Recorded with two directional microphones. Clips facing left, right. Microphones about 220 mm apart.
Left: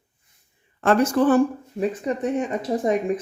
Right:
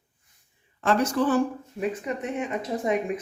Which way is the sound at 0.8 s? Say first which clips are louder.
Left 5 dB; 55° left (ahead or behind).